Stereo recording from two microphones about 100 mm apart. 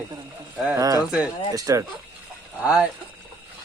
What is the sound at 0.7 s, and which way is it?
Speech, 35° right (ahead or behind).